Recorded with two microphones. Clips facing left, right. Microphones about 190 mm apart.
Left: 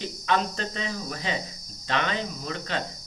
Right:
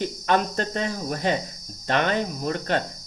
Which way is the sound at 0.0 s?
50° right (ahead or behind).